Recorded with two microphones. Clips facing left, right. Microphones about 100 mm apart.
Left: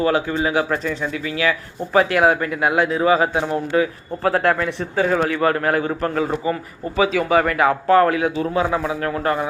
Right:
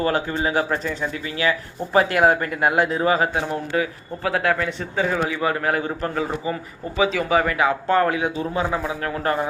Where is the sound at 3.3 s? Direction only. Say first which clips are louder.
Left 4 dB; 25° left (ahead or behind).